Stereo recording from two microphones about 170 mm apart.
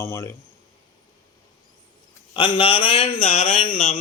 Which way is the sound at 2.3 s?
30° left (ahead or behind).